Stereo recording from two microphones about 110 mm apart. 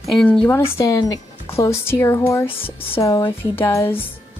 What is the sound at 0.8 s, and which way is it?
Speech, 30° left (ahead or behind).